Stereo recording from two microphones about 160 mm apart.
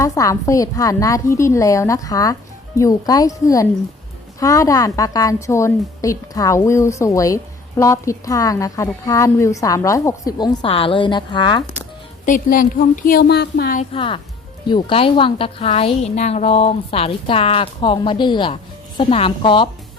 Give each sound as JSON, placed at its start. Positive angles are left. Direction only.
{"t": 0.0, "sound": "a woman's voice", "side_deg": 20}
{"t": 12.2, "sound": "speech", "side_deg": 55}
{"t": 13.9, "sound": "a woman's voice", "side_deg": 35}